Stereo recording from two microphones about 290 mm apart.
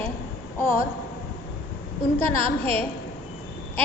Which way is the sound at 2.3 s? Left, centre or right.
Right.